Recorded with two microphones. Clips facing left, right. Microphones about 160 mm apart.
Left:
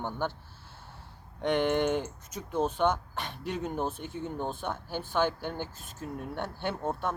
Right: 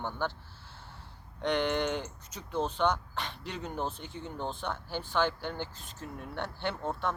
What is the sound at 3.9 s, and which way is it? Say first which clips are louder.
Speech: left 5 dB; 50° left (ahead or behind).